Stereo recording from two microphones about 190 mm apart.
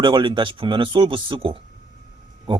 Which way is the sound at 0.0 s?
25° right (ahead or behind).